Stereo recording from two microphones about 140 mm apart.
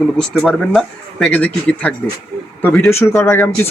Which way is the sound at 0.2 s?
Centre (ahead or behind).